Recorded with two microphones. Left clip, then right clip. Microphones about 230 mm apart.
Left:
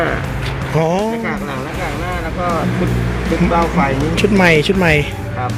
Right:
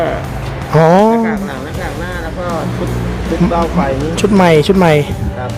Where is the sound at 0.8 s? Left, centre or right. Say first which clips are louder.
Right 8 dB; right.